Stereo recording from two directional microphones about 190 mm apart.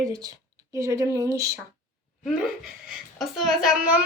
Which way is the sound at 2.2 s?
5° right (ahead or behind).